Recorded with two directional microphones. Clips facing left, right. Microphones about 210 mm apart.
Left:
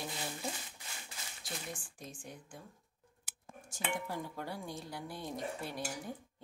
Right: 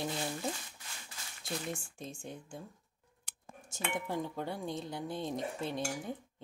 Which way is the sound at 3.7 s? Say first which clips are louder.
Right 2 dB; 20° right (ahead or behind).